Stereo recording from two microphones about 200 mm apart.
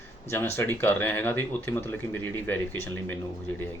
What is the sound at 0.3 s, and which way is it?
Speech, 10° left (ahead or behind).